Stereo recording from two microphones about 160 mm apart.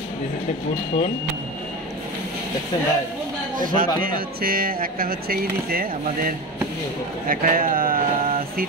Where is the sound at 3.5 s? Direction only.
60° right (ahead or behind).